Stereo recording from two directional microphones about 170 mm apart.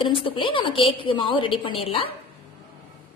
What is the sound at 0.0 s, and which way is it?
A woman's voice, 30° left (ahead or behind).